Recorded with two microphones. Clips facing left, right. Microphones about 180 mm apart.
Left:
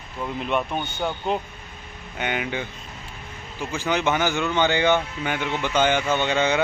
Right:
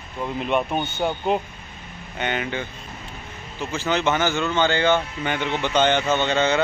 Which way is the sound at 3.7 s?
15° left (ahead or behind).